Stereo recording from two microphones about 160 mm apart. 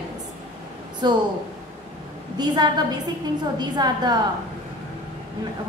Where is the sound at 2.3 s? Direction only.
25° right (ahead or behind).